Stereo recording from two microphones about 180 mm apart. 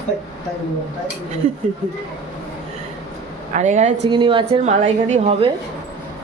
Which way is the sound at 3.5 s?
45° right (ahead or behind).